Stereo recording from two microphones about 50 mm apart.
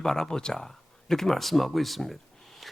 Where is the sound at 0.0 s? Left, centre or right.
Centre.